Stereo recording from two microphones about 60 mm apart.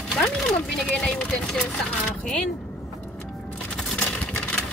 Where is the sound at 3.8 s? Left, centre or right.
Centre.